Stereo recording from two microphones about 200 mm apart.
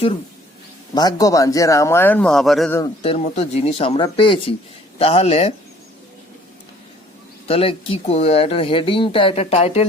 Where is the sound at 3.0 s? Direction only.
30° left (ahead or behind).